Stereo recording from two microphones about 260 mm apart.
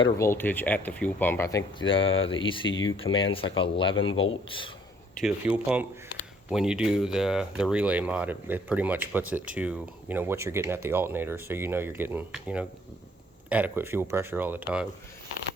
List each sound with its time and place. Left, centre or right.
0.0 s speech: centre
3.9 s speech: left
4.2 s speech: centre
5.2 s speech: centre